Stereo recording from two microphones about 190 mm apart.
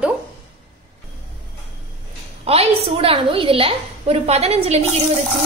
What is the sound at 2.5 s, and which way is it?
A woman's voice, 30° right (ahead or behind).